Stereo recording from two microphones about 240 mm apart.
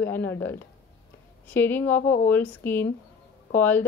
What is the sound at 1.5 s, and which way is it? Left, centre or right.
A woman's voice, centre.